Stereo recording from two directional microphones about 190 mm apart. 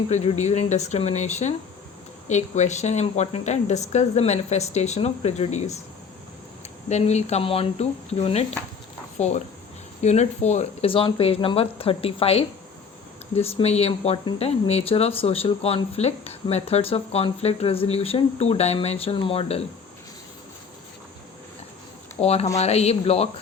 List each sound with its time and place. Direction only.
0.1 s speech: 35° left (ahead or behind)
6.8 s speech: 35° left (ahead or behind)
22.1 s speech: 35° left (ahead or behind)